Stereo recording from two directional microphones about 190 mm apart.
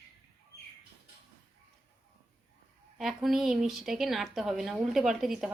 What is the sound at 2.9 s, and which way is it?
A woman's voice, centre (ahead or behind).